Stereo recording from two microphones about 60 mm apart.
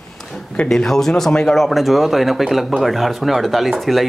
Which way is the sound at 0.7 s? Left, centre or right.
Centre.